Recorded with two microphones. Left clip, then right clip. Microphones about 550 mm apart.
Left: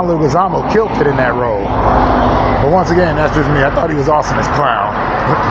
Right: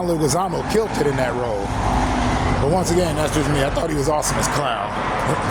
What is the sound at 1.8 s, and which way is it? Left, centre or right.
Vehicle, right.